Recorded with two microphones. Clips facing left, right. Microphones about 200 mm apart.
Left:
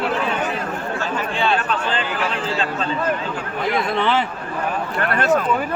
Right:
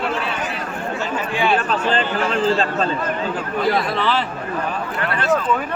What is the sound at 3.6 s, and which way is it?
Speech, 20° left (ahead or behind).